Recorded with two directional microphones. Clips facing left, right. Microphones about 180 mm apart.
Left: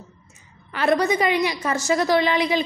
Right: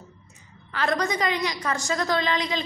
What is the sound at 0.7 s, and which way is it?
A woman's voice, 20° left (ahead or behind).